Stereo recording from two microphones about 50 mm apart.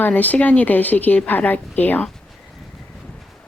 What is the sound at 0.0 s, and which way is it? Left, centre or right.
Speech, left.